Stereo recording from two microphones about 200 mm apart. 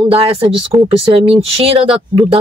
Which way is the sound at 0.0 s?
30° right (ahead or behind).